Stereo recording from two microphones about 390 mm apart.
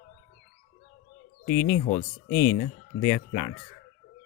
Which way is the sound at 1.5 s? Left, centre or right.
Centre.